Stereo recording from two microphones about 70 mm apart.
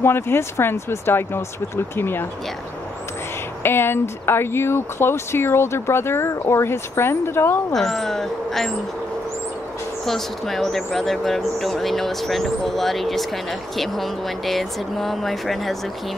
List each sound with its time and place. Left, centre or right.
0.0 s speech: left
3.6 s speech: left
7.7 s speech: centre
10.0 s speech: centre